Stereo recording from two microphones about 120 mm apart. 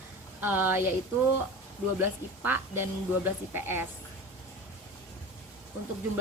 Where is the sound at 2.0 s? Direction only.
20° right (ahead or behind).